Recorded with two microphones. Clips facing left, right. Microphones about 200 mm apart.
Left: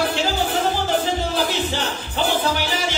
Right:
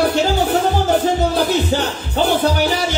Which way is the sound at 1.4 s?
40° right (ahead or behind).